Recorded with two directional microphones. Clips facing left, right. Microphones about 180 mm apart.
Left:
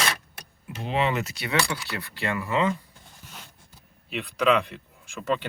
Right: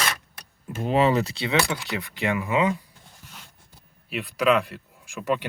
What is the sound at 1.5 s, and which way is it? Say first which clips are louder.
Speech: even; 20° right (ahead or behind).